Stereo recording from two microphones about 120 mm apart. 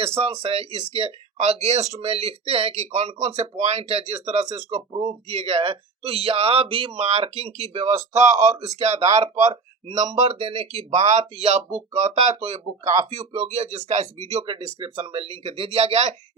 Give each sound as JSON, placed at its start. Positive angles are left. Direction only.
{"t": 0.2, "sound": "speech", "side_deg": -55}
{"t": 4.9, "sound": "speech", "side_deg": -45}
{"t": 8.8, "sound": "speech", "side_deg": -70}
{"t": 10.8, "sound": "speech", "side_deg": -70}
{"t": 14.8, "sound": "speech", "side_deg": -50}